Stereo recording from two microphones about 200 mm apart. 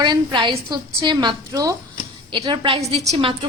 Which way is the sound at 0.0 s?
20° right (ahead or behind).